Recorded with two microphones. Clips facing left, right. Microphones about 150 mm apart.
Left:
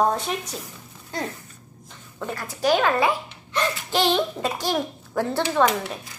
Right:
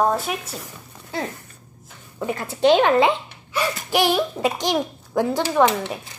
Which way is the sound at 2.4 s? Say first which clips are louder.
Right 5 dB; 25° right (ahead or behind).